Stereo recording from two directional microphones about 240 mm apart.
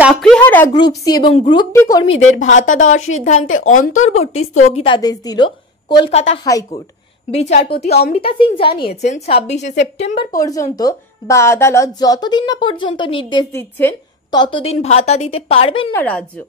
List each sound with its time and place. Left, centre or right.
0.0 s speech: centre
0.7 s a woman's voice: centre
2.0 s a woman's voice: left
10.3 s a woman's voice: centre
15.9 s speech: centre